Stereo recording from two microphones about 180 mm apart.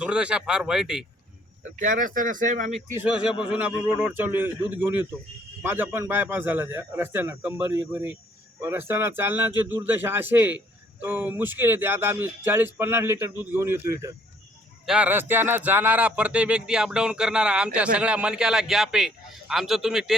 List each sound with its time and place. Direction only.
0.0 s speech: 5° right (ahead or behind)
1.8 s speech: 50° right (ahead or behind)
2.9 s a man's voice: 10° right (ahead or behind)